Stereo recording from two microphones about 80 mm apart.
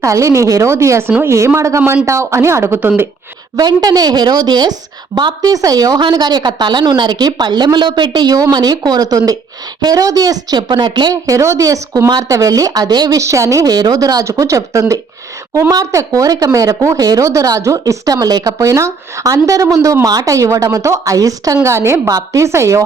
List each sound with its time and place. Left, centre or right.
0.0 s a woman's voice: right
3.6 s a woman's voice: right
10.7 s speech: right
11.1 s a woman's voice: right
13.1 s a woman's voice: right
22.1 s a woman's voice: right